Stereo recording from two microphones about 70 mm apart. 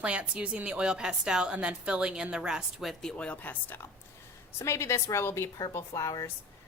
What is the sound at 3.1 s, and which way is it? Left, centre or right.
Speech, centre.